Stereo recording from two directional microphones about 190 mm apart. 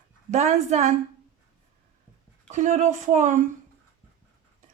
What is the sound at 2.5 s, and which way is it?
Speech, 40° right (ahead or behind).